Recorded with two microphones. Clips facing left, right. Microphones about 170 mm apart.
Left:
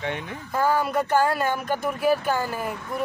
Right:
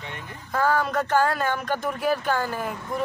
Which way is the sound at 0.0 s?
75° left (ahead or behind).